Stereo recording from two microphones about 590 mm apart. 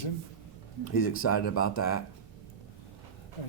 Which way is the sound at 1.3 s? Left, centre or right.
Centre.